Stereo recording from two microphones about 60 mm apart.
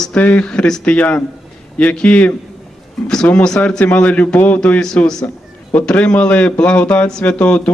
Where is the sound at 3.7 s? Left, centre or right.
Left.